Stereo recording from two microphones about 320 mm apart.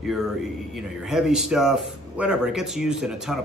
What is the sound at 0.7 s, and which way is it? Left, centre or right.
Speech, centre.